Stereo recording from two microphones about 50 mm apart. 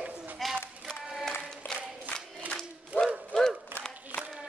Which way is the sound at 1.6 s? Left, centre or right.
Left.